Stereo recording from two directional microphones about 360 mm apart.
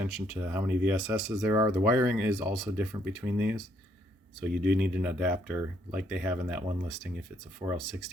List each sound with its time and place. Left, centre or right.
0.0 s speech: centre
4.5 s speech: right
4.8 s speech: centre